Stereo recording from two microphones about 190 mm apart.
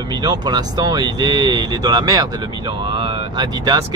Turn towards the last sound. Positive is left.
turn(degrees=-20)  # may be behind; listen again after turning